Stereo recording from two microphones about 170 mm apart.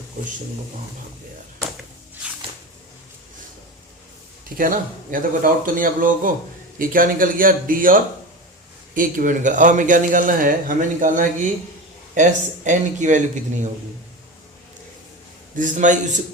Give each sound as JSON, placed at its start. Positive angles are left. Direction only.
{"t": 4.4, "sound": "a man's voice", "side_deg": -55}
{"t": 15.5, "sound": "a man's voice", "side_deg": -50}